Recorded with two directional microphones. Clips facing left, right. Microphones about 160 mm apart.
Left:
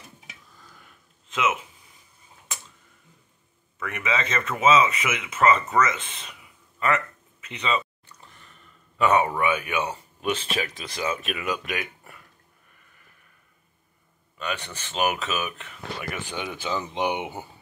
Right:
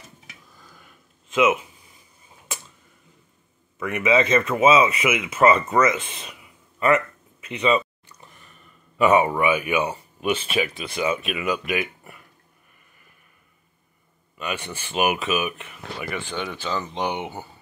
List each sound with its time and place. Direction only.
1.3 s speech: 15° right (ahead or behind)
3.8 s speech: 15° right (ahead or behind)
7.4 s speech: 15° right (ahead or behind)
8.9 s speech: 10° right (ahead or behind)
14.4 s speech: 10° right (ahead or behind)
16.1 s speech: 10° left (ahead or behind)